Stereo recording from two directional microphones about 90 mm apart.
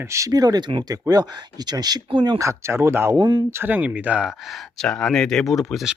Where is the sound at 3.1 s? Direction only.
55° right (ahead or behind).